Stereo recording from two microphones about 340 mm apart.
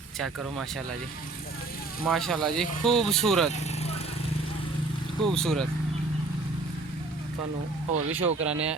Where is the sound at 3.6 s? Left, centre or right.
Centre.